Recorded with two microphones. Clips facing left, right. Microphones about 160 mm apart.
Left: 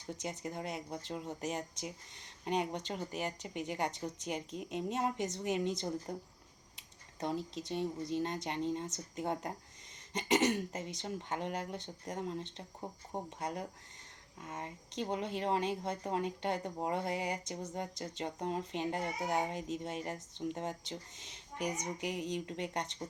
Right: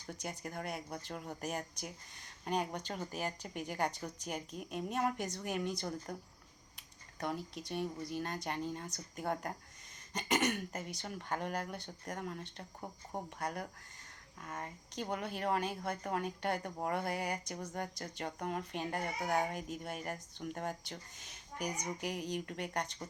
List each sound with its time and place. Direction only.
0.0 s speech: 20° left (ahead or behind)